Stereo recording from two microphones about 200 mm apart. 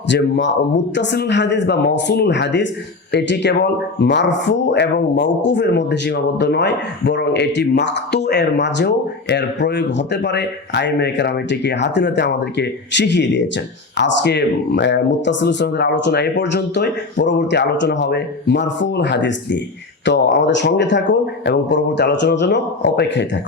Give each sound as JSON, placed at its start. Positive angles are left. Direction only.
{"t": 0.1, "sound": "speech", "side_deg": 65}